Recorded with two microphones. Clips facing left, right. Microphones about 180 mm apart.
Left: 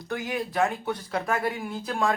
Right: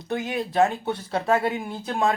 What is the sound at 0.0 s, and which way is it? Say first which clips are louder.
A man's voice: right 3 dB; 25° right (ahead or behind).